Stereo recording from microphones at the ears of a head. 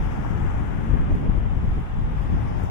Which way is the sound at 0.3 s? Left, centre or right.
Left.